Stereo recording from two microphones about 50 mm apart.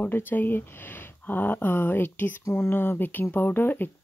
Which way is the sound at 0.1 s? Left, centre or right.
Left.